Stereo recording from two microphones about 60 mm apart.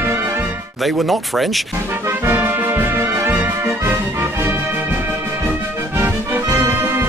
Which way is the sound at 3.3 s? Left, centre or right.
Right.